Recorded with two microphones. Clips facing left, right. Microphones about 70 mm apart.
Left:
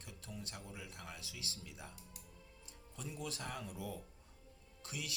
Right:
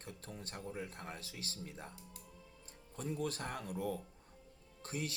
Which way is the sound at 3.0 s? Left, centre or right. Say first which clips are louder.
Right 6 dB; right.